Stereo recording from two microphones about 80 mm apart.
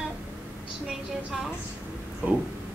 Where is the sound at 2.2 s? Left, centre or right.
Right.